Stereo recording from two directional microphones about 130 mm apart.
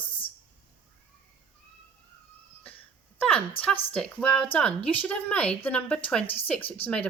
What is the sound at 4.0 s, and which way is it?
A woman's voice, 5° left (ahead or behind).